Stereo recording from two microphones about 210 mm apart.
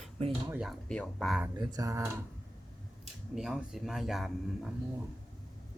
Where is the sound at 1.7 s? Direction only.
15° right (ahead or behind).